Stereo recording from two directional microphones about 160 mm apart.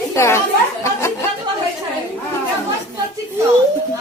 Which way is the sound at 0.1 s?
15° left (ahead or behind).